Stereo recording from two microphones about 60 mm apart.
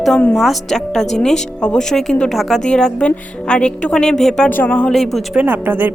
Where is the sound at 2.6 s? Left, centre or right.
Centre.